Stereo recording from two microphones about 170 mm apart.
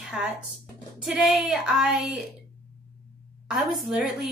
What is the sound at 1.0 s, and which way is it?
A woman's voice, centre (ahead or behind).